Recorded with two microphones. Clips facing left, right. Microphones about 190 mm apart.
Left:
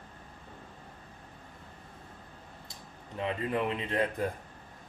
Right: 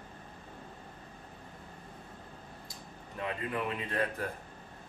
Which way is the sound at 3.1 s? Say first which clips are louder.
Left 4 dB; 25° left (ahead or behind).